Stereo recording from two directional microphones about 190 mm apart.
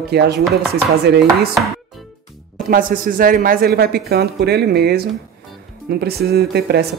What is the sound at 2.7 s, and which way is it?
Speech, 45° right (ahead or behind).